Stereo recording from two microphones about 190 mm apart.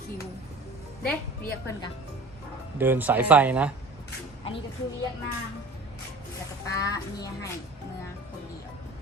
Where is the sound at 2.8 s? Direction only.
10° right (ahead or behind).